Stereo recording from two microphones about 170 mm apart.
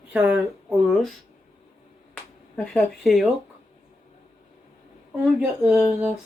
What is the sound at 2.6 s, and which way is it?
Speech, centre (ahead or behind).